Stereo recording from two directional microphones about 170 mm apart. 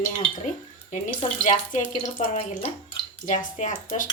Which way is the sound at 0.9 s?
50° left (ahead or behind).